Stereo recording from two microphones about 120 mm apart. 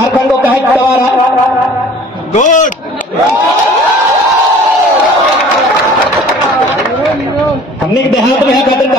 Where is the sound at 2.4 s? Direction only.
90° left.